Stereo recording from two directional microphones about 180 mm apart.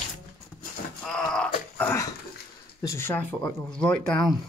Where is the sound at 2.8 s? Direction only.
15° left (ahead or behind).